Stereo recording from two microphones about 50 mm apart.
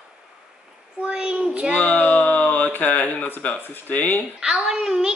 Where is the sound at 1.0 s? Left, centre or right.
Centre.